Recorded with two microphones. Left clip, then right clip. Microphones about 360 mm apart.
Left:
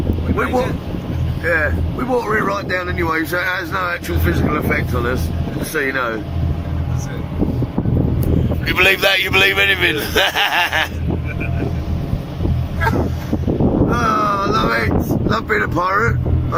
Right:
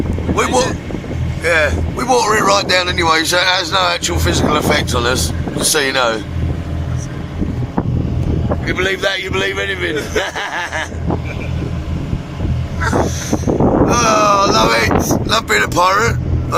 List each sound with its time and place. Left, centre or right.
1.5 s a man's voice: centre
8.6 s a man's voice: centre
13.0 s boat: right
14.0 s wind noise: centre
14.8 s a sound: right
15.3 s speech: centre